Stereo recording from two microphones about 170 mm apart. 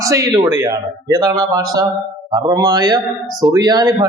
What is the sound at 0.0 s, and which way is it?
Speech, 20° right (ahead or behind).